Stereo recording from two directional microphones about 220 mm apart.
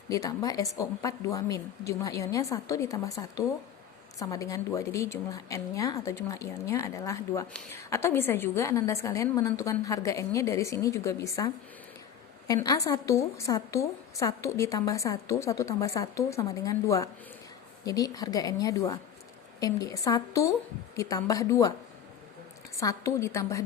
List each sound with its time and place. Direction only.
0.1 s a woman's voice: 15° left (ahead or behind)
22.7 s a woman's voice: 15° left (ahead or behind)